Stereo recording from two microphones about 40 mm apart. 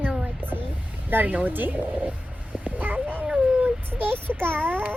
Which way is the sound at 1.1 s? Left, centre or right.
Right.